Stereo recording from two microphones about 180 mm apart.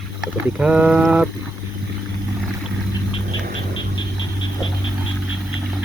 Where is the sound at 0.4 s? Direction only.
5° right (ahead or behind).